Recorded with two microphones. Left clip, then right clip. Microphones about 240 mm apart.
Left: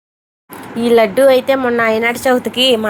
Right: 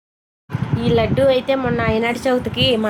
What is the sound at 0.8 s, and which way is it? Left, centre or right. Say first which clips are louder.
A woman's voice: left 7 dB; centre.